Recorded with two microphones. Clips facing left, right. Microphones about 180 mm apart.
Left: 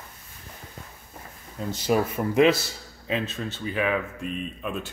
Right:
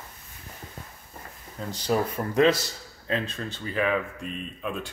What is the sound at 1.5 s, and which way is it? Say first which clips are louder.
Speech: left 2 dB; 10° left (ahead or behind).